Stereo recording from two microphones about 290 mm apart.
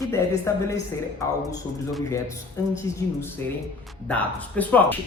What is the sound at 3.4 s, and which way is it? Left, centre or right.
Speech, centre.